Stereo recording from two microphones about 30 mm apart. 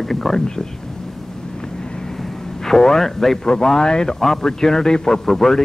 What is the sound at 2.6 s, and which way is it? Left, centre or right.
A man's voice, centre.